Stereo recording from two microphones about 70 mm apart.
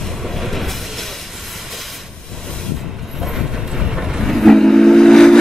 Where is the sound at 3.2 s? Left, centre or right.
Centre.